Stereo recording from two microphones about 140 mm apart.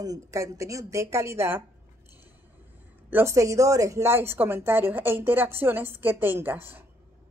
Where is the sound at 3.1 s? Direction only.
15° right (ahead or behind).